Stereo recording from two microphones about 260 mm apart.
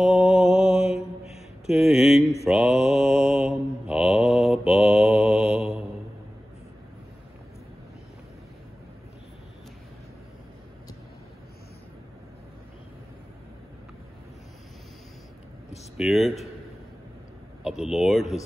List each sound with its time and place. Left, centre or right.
0.0 s mantra: centre
0.8 s mantra: left
1.7 s speech: centre
2.4 s mantra: centre
16.0 s a sound: centre
17.6 s speech: centre